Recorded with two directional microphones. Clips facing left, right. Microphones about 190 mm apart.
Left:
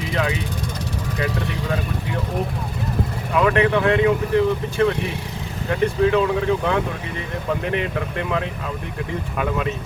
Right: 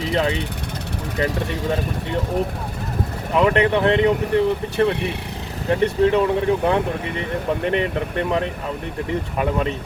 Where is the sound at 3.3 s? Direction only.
25° right (ahead or behind).